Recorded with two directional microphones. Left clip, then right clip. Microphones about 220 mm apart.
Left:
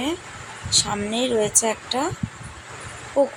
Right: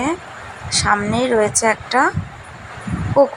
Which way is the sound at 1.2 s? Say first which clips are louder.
Right 5 dB; 5° right (ahead or behind).